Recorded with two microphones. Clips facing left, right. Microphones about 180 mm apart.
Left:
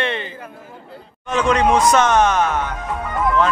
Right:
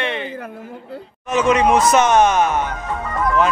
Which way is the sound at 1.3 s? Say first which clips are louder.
Right 1 dB; 5° right (ahead or behind).